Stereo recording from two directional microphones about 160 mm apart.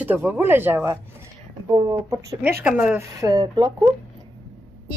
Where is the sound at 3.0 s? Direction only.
20° right (ahead or behind).